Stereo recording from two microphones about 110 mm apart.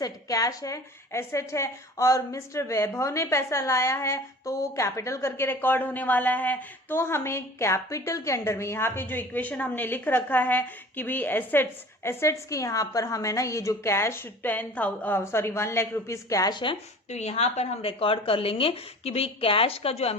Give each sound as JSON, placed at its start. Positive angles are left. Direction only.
{"t": 0.0, "sound": "a woman's voice", "side_deg": 30}
{"t": 17.1, "sound": "a woman's voice", "side_deg": 80}